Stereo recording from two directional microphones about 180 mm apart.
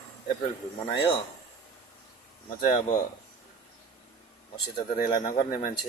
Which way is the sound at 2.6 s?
30° left (ahead or behind).